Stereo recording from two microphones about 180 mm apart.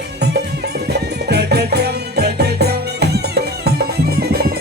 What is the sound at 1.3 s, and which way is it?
Music, 65° right (ahead or behind).